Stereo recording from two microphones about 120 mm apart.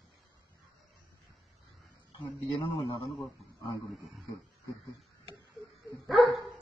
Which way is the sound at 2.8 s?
50° left (ahead or behind).